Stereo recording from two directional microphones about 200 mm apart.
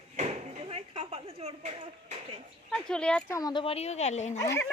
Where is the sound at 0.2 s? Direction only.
30° right (ahead or behind).